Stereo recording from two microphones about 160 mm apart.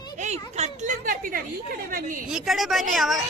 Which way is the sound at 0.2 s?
45° right (ahead or behind).